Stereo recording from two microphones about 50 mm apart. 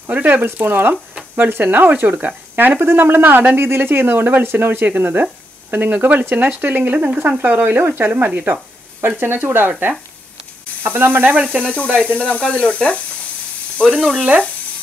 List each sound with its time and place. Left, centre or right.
0.1 s speech: right
2.8 s speech: right
9.0 s speech: right
11.6 s speech: left
13.8 s speech: centre